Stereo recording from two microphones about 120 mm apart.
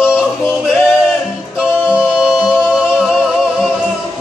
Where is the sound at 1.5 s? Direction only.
10° right (ahead or behind).